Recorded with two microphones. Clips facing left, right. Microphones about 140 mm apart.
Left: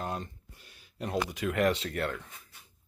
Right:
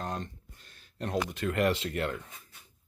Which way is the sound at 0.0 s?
5° left (ahead or behind).